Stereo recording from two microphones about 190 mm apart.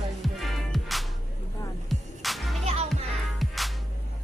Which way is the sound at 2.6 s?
35° right (ahead or behind).